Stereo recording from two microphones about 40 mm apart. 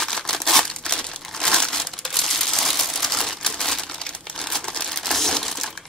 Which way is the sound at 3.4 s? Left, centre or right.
Centre.